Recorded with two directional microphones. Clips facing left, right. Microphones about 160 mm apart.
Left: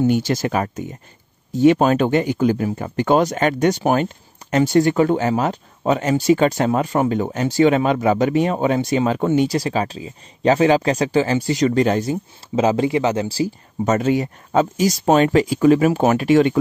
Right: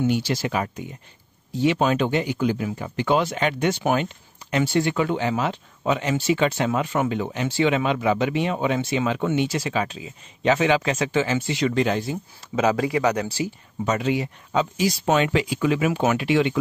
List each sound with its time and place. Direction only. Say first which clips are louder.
0.0 s speech: left 5 dB; 45° left (ahead or behind)
12.5 s speech: left 4 dB; 25° left (ahead or behind)
13.8 s speech: left 5 dB; 45° left (ahead or behind)